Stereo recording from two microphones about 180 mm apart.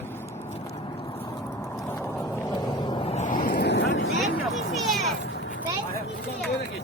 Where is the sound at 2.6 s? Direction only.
25° left (ahead or behind); by 4.1 s 85° left.